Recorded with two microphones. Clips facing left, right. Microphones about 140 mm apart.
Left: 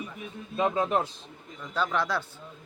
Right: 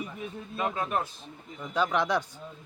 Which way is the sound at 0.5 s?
20° left (ahead or behind).